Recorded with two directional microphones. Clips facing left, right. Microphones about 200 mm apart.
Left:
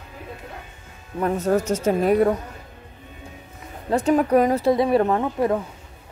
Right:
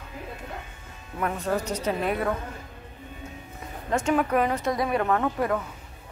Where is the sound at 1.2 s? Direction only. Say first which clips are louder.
Left 6 dB; 40° left (ahead or behind).